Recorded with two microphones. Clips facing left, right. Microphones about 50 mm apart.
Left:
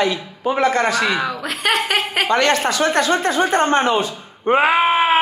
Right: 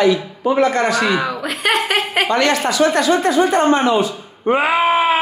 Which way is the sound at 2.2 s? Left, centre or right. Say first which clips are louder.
Left 2 dB; left.